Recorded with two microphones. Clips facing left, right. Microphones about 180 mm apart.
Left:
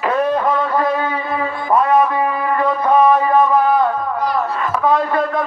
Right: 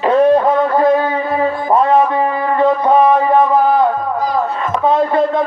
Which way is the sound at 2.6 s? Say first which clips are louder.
Right 3 dB; 25° right (ahead or behind).